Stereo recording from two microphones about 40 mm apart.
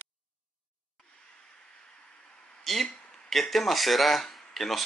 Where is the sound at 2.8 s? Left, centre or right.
Left.